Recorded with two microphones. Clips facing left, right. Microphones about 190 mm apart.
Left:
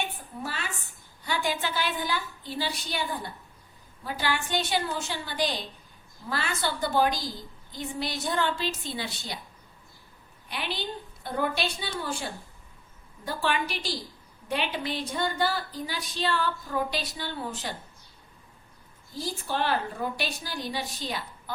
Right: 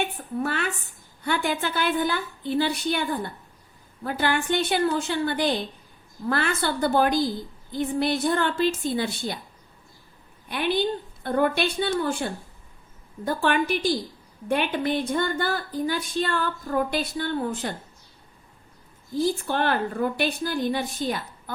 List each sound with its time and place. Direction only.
0.0 s a sound: 60° right (ahead or behind)
1.2 s a woman's voice: 55° right (ahead or behind)
10.5 s a woman's voice: 55° right (ahead or behind)
19.1 s a woman's voice: 55° right (ahead or behind)